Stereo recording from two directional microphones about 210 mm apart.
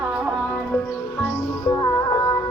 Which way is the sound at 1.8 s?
15° left (ahead or behind).